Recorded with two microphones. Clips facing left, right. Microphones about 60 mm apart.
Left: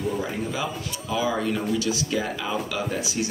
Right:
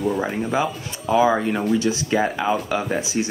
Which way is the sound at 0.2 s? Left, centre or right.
Right.